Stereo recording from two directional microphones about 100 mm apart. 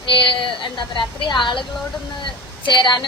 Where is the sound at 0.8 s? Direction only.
50° left (ahead or behind).